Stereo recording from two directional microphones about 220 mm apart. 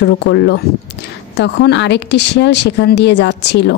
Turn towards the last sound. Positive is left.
turn(degrees=50)  # may be behind; listen again after turning